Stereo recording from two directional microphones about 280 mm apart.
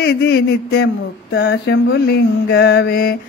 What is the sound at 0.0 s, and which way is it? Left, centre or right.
Mantra, left.